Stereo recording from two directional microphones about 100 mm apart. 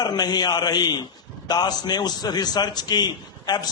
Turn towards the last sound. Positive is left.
turn(degrees=45)  # may be behind; listen again after turning